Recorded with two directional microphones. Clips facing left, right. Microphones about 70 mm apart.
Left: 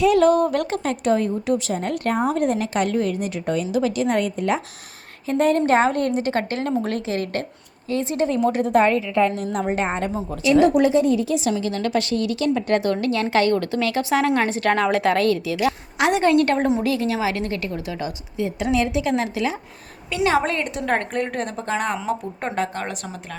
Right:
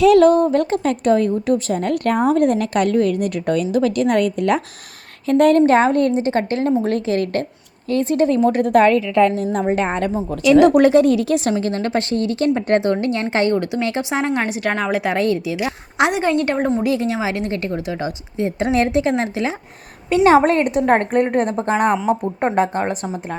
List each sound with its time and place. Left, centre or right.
0.2 s a woman's voice: right
5.6 s a woman's voice: right
6.1 s a woman's voice: right
9.3 s a woman's voice: right
10.4 s speech: right
10.7 s speech: right
11.5 s a woman's voice: right
14.4 s a woman's voice: centre
16.6 s a woman's voice: centre
16.8 s a woman's voice: right